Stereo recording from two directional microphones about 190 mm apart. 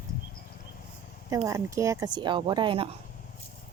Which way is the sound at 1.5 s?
15° right (ahead or behind).